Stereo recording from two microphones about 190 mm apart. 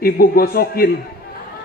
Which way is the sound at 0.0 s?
50° left (ahead or behind).